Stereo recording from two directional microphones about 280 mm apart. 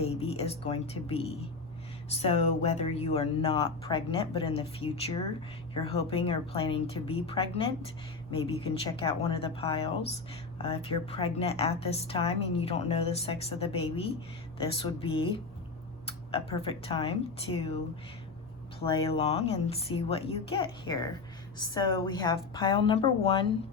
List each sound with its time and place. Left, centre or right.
0.0 s a woman's voice: left
18.8 s a woman's voice: centre